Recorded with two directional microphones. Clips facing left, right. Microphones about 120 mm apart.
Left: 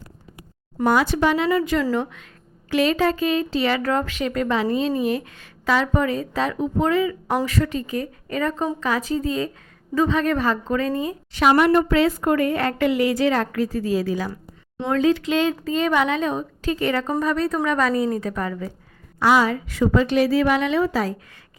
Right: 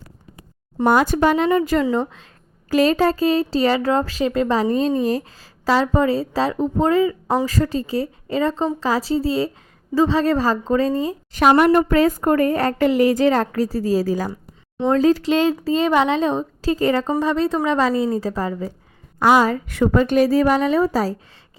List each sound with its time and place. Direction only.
0.9 s a woman's voice: 45° right (ahead or behind)
1.8 s speech: 20° right (ahead or behind)
2.6 s a woman's voice: 40° right (ahead or behind)
19.2 s a woman's voice: 45° right (ahead or behind)